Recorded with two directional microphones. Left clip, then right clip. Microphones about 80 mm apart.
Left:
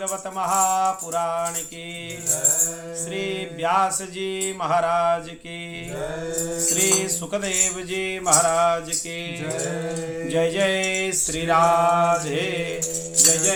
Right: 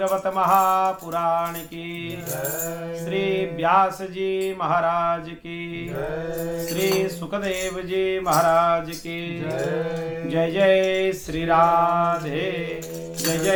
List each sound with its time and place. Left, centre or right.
0.0 s mantra: left
3.1 s mantra: left
6.7 s music: left
8.2 s mantra: left
10.2 s mantra: left